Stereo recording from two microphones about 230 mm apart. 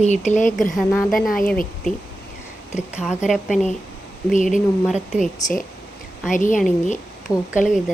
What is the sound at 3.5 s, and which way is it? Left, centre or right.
Speech, left.